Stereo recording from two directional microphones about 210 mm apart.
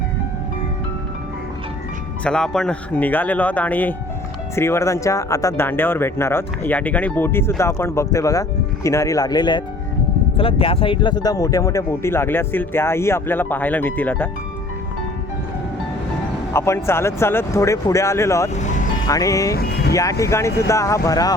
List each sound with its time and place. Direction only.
2.2 s speech: 5° left (ahead or behind)
16.5 s speech: 10° left (ahead or behind)
18.5 s music: 35° left (ahead or behind)
19.0 s speech: 15° left (ahead or behind)
19.5 s music: 50° left (ahead or behind)
19.9 s speech: 15° left (ahead or behind)